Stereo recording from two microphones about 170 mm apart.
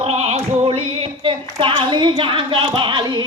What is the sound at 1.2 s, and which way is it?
Speech, 30° right (ahead or behind).